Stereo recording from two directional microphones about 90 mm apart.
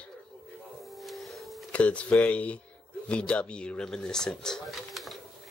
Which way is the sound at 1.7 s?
15° left (ahead or behind).